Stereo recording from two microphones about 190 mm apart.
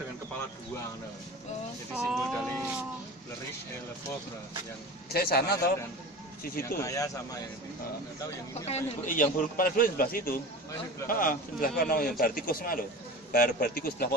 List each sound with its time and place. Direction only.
2.0 s speech: centre (ahead or behind)
5.1 s a man's voice: 55° left (ahead or behind)
6.8 s speech: 15° left (ahead or behind)
8.6 s a man's voice: 40° left (ahead or behind)